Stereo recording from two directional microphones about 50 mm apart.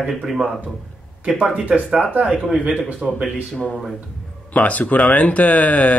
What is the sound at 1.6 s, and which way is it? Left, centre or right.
Speech, right.